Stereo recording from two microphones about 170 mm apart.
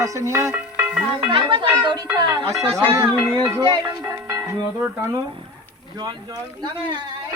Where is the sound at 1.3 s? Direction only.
30° right (ahead or behind).